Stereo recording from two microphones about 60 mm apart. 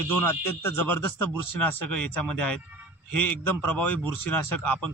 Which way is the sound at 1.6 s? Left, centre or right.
Left.